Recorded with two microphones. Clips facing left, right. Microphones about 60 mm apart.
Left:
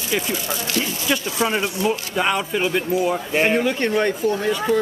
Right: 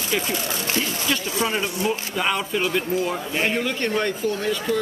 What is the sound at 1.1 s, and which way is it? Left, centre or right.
Speech, centre.